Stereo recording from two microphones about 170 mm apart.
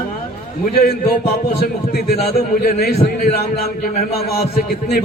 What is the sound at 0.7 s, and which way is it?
A man's voice, 65° left (ahead or behind).